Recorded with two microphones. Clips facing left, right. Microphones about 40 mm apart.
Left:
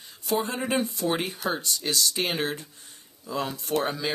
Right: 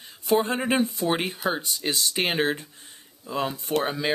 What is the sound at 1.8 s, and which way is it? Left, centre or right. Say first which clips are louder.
Speech: right 2 dB; right.